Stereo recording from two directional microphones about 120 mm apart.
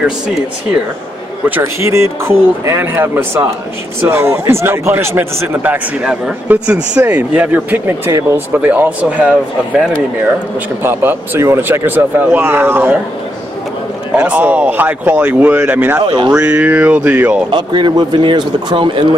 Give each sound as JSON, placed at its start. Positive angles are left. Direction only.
{"t": 1.6, "sound": "speech", "side_deg": -25}
{"t": 10.8, "sound": "speech", "side_deg": -20}
{"t": 14.1, "sound": "speech", "side_deg": -10}
{"t": 17.5, "sound": "a man's voice", "side_deg": -40}